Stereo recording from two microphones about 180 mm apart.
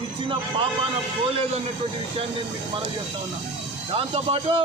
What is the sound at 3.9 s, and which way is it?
Speech, 35° right (ahead or behind).